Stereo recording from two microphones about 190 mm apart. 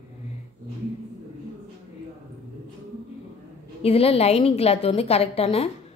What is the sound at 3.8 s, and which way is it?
A woman's voice, 30° left (ahead or behind).